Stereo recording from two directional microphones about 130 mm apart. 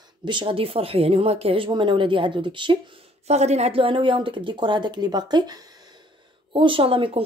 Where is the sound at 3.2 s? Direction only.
55° right (ahead or behind).